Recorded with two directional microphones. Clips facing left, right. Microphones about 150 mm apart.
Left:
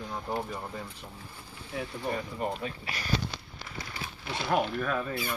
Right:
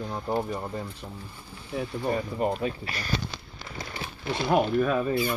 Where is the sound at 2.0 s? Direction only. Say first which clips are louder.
Right 6 dB; 40° right (ahead or behind).